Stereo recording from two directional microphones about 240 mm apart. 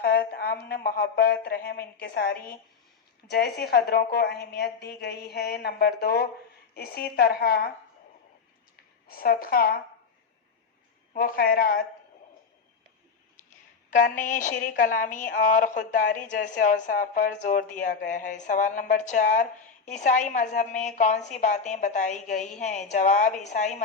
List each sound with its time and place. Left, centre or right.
0.0 s speech: left
9.0 s speech: left
11.1 s speech: left
13.9 s a woman's voice: left